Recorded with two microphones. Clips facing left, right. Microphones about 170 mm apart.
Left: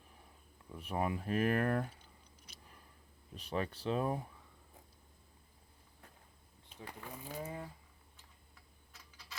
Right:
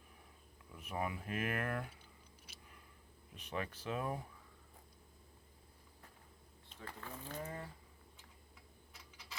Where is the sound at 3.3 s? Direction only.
35° left (ahead or behind).